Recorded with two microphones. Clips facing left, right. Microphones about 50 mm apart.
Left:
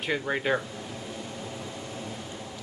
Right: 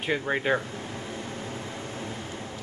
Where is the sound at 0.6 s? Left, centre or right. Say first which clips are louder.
Right 2 dB; right.